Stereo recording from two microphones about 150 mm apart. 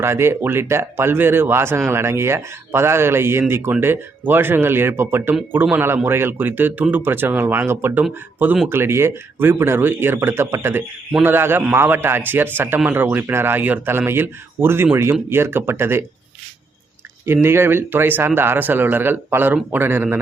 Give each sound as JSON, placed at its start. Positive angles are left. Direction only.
{"t": 0.0, "sound": "speech", "side_deg": -15}
{"t": 17.2, "sound": "speech", "side_deg": -15}